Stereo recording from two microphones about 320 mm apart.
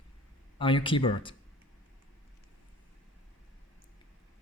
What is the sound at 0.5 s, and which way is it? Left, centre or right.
Speech, centre.